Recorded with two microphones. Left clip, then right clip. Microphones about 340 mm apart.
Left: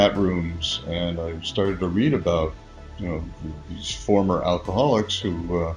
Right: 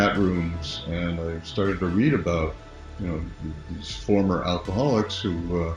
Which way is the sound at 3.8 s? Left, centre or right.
Left.